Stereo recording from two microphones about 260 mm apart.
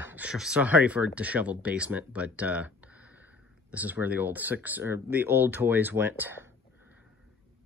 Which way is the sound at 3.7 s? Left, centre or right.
Centre.